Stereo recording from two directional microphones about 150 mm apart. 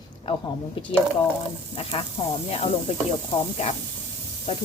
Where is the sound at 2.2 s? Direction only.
35° left (ahead or behind).